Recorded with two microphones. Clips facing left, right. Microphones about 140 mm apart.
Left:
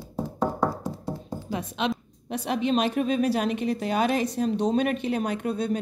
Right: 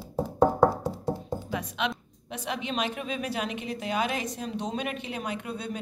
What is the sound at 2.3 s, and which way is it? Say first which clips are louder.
A woman's voice: left 8 dB; 40° left (ahead or behind).